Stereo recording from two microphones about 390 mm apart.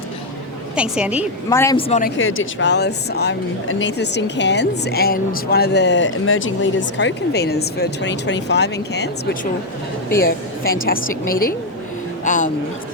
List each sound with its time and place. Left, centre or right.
0.8 s a woman's voice: centre
1.5 s speech: centre
12.2 s a sound: centre